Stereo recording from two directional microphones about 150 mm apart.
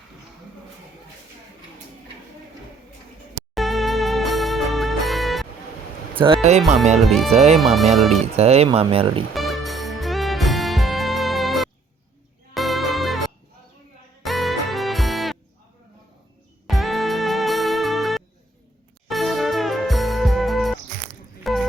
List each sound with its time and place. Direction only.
3.5 s music: centre (ahead or behind)
6.1 s speech: 35° right (ahead or behind)
6.6 s speech: centre (ahead or behind)
8.4 s speech: 45° right (ahead or behind)
9.3 s music: centre (ahead or behind)
16.6 s music: centre (ahead or behind)